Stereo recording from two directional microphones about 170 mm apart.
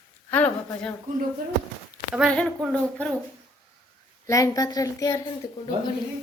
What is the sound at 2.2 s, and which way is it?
Speech, 5° left (ahead or behind).